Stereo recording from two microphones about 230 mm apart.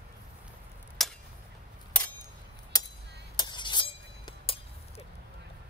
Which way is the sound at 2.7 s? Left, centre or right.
Centre.